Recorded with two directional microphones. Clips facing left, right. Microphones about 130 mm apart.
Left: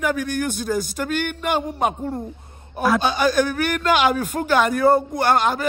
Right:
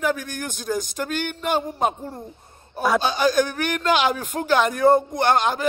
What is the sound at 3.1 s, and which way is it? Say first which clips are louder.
Speech: left 1 dB; 50° left (ahead or behind).